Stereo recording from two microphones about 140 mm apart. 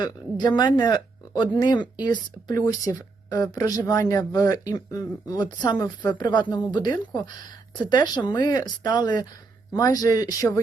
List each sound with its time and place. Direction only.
0.4 s speech: 30° left (ahead or behind)